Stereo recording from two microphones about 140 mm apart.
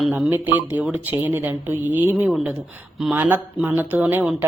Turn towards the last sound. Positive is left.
turn(degrees=-15)  # may be behind; listen again after turning